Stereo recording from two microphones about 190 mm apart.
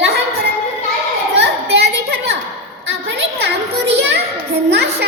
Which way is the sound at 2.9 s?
70° right (ahead or behind).